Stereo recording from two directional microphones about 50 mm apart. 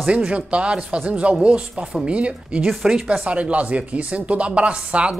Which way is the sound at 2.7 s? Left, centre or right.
Centre.